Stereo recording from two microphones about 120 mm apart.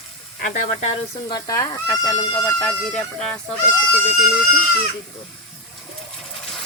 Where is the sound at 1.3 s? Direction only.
30° left (ahead or behind).